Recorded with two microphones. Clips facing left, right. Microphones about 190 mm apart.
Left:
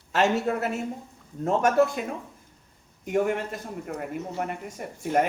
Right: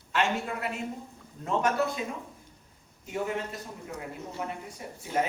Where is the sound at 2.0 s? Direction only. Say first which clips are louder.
Left 3 dB; 60° left (ahead or behind).